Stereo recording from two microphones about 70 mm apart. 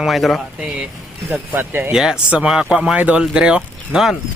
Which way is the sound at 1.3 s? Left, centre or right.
Right.